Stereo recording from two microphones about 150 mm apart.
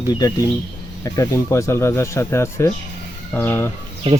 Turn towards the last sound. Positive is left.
turn(degrees=-35)  # may be behind; listen again after turning